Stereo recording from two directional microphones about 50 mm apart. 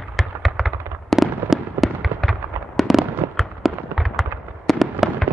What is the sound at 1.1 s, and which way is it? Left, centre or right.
Fireworks, centre.